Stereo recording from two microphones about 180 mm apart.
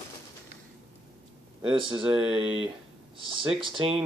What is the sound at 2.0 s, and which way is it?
Speech, 5° right (ahead or behind).